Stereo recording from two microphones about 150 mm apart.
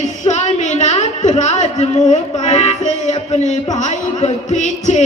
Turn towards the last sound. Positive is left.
turn(degrees=50)  # may be behind; listen again after turning